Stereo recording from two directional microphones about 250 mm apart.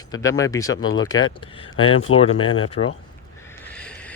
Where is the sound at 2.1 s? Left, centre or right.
Left.